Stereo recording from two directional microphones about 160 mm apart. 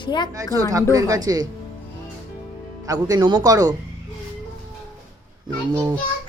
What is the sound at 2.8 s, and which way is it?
Speech, 25° right (ahead or behind).